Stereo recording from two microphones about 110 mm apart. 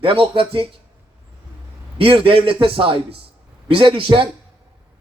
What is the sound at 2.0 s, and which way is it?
A man's voice, 55° right (ahead or behind).